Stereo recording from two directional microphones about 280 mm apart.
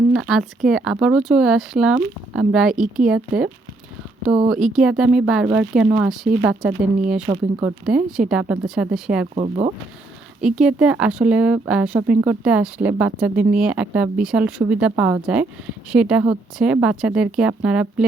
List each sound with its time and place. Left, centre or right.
0.1 s speech: centre
9.3 s speech: right
10.4 s speech: centre